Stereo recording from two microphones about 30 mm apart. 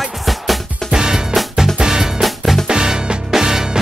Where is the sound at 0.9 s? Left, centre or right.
Right.